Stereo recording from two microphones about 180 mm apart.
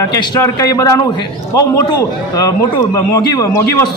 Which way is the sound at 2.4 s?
20° left (ahead or behind).